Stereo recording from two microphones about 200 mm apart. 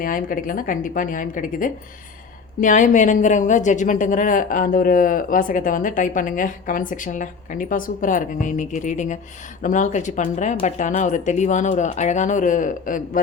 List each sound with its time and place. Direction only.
0.0 s a woman's voice: 45° left (ahead or behind)